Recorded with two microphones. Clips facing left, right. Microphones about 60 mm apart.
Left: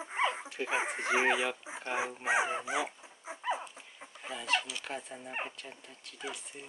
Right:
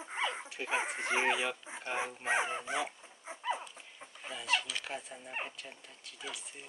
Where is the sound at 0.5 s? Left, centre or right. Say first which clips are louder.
Left 2 dB; centre.